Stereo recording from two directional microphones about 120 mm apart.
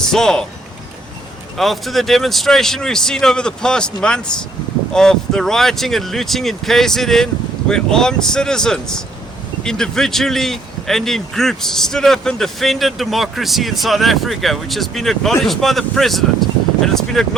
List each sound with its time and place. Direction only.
0.0 s speech: 5° left (ahead or behind)
1.5 s speech: centre (ahead or behind)